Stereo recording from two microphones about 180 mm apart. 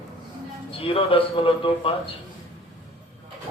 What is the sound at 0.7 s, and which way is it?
A man's voice, 30° left (ahead or behind).